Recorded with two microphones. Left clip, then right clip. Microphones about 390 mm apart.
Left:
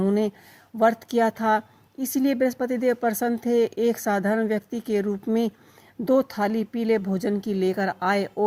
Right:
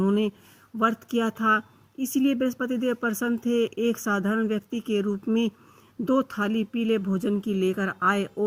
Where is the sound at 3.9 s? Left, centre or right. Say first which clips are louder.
Left 3 dB; centre.